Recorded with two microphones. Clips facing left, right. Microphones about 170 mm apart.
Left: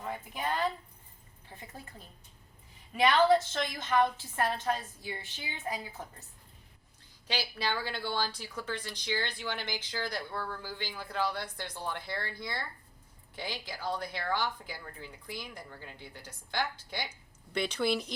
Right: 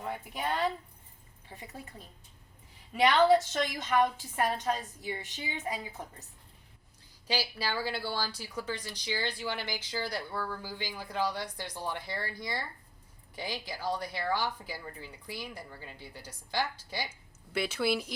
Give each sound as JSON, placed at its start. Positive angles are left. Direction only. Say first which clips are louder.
{"t": 0.0, "sound": "a woman's voice", "louder": "right 1 dB", "side_deg": -10}
{"t": 1.5, "sound": "speech", "louder": "right 2 dB", "side_deg": -15}
{"t": 3.2, "sound": "speech", "louder": "right 1 dB", "side_deg": -20}
{"t": 7.3, "sound": "speech", "louder": "right 1 dB", "side_deg": -10}